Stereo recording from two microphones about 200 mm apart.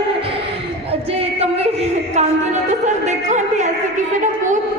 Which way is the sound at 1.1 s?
30° right (ahead or behind).